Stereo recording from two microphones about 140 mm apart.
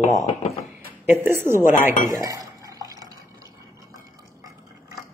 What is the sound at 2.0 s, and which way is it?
Drip, 25° right (ahead or behind).